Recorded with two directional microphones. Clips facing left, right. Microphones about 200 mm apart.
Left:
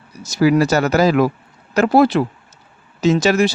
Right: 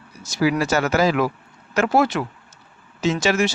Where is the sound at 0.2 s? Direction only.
40° left (ahead or behind).